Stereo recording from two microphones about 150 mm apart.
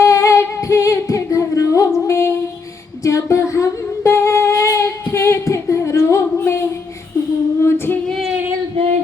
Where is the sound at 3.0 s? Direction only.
20° left (ahead or behind).